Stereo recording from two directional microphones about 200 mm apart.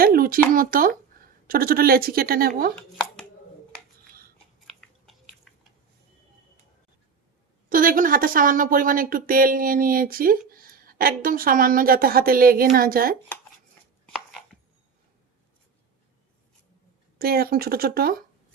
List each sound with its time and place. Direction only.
0.0 s a sound: 45° right (ahead or behind)
1.5 s speech: 45° right (ahead or behind)
4.6 s chewing: centre (ahead or behind)
5.5 s a sound: centre (ahead or behind)
7.7 s speech: 45° right (ahead or behind)
17.2 s speech: 50° right (ahead or behind)